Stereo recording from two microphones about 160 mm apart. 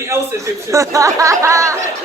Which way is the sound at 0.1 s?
20° right (ahead or behind).